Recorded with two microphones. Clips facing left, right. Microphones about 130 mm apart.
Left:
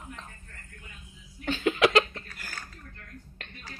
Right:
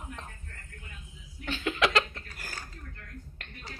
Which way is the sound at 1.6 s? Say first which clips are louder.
Left 5 dB; 25° left (ahead or behind).